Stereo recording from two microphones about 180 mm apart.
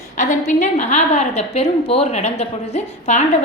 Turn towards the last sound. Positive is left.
turn(degrees=40)  # may be behind; listen again after turning